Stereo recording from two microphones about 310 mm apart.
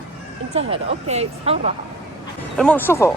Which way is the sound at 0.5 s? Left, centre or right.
Centre.